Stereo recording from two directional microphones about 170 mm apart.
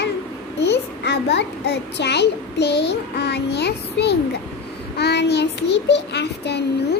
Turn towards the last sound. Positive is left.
turn(degrees=80)